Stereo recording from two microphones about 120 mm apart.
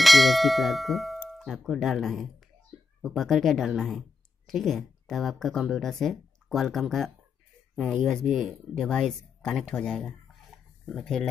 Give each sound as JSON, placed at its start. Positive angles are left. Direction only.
{"t": 0.0, "sound": "speech", "side_deg": 0}